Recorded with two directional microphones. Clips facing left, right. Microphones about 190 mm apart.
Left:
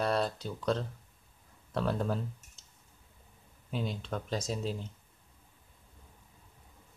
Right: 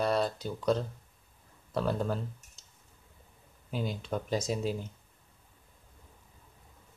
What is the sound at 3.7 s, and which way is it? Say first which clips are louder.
Speech: right 2 dB; 5° right (ahead or behind).